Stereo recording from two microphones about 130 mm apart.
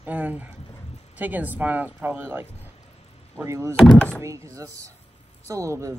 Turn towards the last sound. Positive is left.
turn(degrees=-25)  # may be behind; listen again after turning